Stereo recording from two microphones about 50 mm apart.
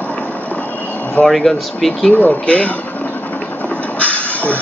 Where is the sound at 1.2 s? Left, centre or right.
Centre.